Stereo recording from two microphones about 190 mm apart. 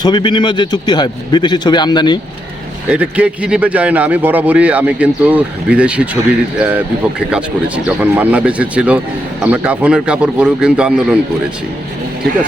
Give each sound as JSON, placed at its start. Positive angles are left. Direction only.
{"t": 0.0, "sound": "a man's voice", "side_deg": 25}
{"t": 2.9, "sound": "speech", "side_deg": -5}
{"t": 7.9, "sound": "speech", "side_deg": -10}